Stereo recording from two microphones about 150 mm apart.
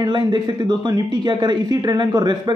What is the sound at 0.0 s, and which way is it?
Speech, 30° right (ahead or behind).